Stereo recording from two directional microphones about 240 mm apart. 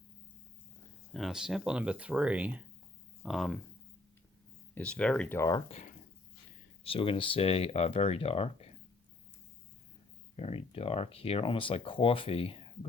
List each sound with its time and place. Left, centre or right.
1.1 s speech: centre
4.7 s speech: centre
5.6 s speech: left
10.3 s speech: left